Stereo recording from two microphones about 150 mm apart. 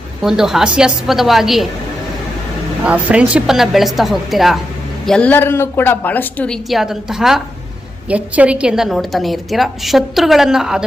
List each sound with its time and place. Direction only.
0.2 s a woman's voice: 5° right (ahead or behind)
2.8 s a woman's voice: 10° right (ahead or behind)